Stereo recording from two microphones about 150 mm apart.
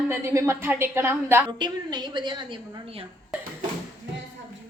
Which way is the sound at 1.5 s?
30° right (ahead or behind).